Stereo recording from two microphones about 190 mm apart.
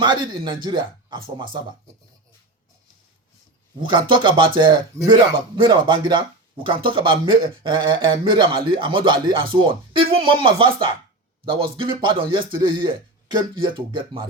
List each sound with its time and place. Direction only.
0.0 s a man's voice: 25° right (ahead or behind)
3.8 s a man's voice: 25° right (ahead or behind)